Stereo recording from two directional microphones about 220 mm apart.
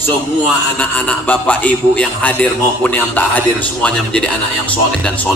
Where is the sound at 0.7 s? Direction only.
5° left (ahead or behind).